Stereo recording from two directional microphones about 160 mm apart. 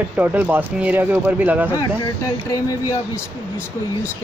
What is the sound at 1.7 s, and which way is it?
Speech, 20° left (ahead or behind).